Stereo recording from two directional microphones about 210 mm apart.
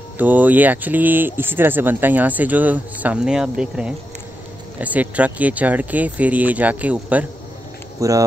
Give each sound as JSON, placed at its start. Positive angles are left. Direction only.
{"t": 0.2, "sound": "speech", "side_deg": -10}